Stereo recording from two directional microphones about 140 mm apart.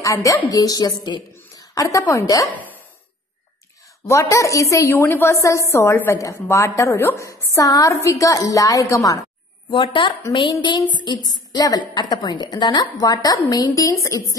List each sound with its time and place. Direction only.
0.0 s a woman's voice: 25° left (ahead or behind)
2.5 s a sound: 10° left (ahead or behind)
4.0 s a woman's voice: 20° left (ahead or behind)
9.7 s a woman's voice: 35° left (ahead or behind)